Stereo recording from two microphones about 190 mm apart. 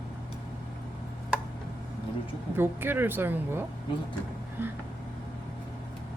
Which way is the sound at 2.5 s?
10° right (ahead or behind).